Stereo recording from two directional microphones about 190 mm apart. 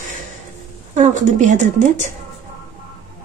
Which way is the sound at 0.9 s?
40° right (ahead or behind).